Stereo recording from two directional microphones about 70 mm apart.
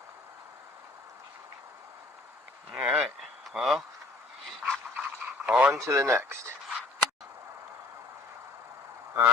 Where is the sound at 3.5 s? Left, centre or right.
Centre.